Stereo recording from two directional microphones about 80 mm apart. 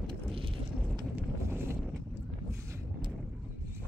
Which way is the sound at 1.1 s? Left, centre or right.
Right.